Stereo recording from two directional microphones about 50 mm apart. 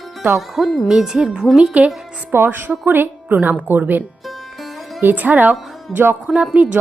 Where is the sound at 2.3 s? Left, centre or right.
Right.